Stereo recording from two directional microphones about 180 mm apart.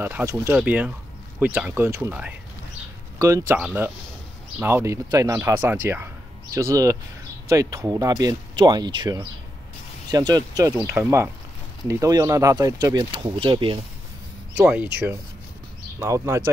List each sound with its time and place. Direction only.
0.0 s speech: 15° right (ahead or behind)
14.6 s speech: 10° right (ahead or behind)